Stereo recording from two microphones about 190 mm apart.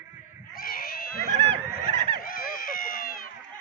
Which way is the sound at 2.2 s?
50° left (ahead or behind).